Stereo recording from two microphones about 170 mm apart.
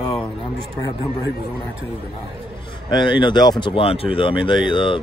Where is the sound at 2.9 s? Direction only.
25° left (ahead or behind).